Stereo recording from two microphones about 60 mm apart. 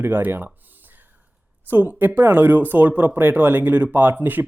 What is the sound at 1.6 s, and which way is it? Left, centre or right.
Speech, right.